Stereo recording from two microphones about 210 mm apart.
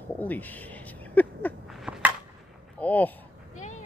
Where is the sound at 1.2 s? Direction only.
5° left (ahead or behind).